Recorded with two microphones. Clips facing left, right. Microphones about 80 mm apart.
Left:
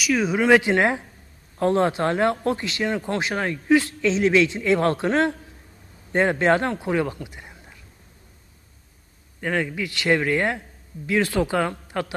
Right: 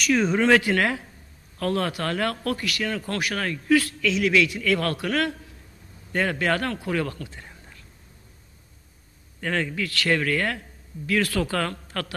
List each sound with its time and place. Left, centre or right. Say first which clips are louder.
0.0 s speech: even; centre
0.6 s speech: left 3 dB; left
9.4 s speech: left 2 dB; centre